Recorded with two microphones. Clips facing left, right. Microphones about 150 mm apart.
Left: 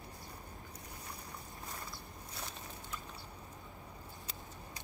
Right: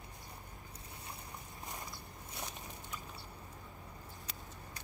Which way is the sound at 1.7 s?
20° right (ahead or behind).